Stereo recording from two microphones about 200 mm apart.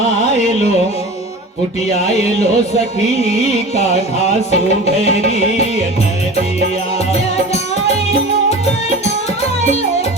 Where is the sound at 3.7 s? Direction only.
35° left (ahead or behind).